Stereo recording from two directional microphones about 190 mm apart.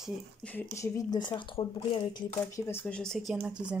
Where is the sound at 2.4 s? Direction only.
10° left (ahead or behind); by 3.8 s 5° right (ahead or behind).